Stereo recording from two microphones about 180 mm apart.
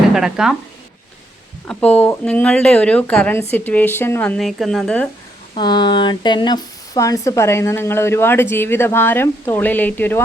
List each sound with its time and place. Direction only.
0.1 s speech: 5° right (ahead or behind)
1.6 s speech: 5° left (ahead or behind)
5.5 s speech: 25° left (ahead or behind)